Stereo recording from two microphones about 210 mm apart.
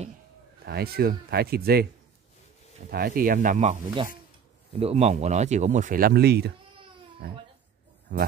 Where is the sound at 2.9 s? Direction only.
45° right (ahead or behind).